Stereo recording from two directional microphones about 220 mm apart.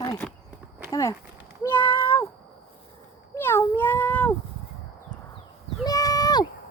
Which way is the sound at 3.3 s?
10° left (ahead or behind).